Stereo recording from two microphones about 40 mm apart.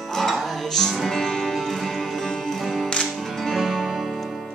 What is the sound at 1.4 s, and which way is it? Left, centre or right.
Music, centre.